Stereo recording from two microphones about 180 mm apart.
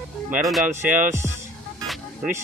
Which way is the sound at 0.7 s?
15° right (ahead or behind).